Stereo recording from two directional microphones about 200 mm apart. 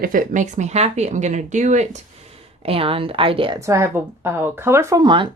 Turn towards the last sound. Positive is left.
turn(degrees=-20)  # may be behind; listen again after turning